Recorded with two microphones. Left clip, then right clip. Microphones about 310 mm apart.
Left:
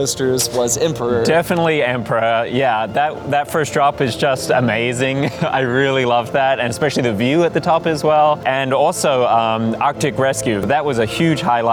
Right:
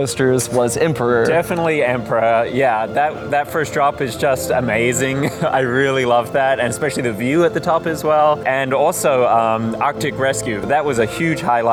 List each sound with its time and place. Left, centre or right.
0.3 s speech: right
1.2 s speech: left
7.3 s speech: left